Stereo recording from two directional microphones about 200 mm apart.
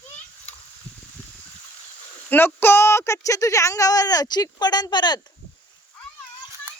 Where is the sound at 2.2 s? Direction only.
10° left (ahead or behind).